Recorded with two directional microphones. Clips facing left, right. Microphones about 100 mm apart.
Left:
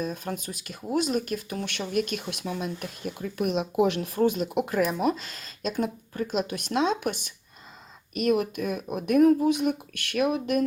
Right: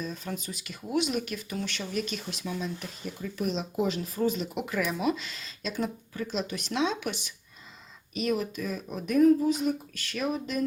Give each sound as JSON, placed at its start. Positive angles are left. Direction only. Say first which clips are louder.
{"t": 0.0, "sound": "speech", "louder": "left 4 dB", "side_deg": 50}